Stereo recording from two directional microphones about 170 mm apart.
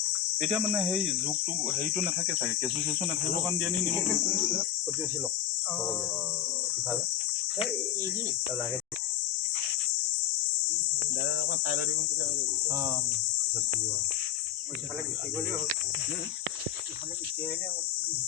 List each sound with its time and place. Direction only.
0.4 s cricket: 5° right (ahead or behind)
3.6 s cricket: 5° left (ahead or behind)
11.2 s cricket: 70° left (ahead or behind)